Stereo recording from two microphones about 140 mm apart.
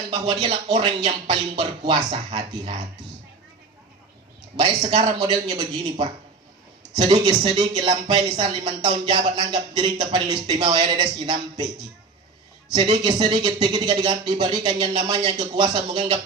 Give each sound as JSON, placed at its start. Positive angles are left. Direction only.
{"t": 0.1, "sound": "speech", "side_deg": -35}
{"t": 4.8, "sound": "a man's voice", "side_deg": -60}
{"t": 5.1, "sound": "a man's voice", "side_deg": -30}
{"t": 12.7, "sound": "speech", "side_deg": -30}